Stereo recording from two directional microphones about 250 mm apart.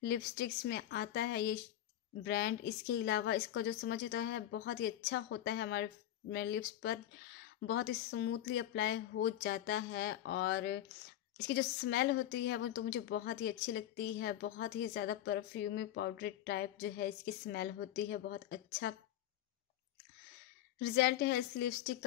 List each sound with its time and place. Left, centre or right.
0.0 s a woman's voice: left
20.8 s a woman's voice: left